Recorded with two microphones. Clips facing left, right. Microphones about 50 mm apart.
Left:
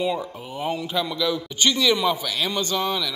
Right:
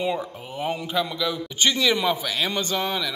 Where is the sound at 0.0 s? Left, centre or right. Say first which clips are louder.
Left 1 dB; right.